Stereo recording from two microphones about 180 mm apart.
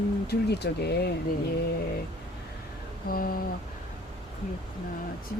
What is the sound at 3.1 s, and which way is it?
Speech, 55° left (ahead or behind).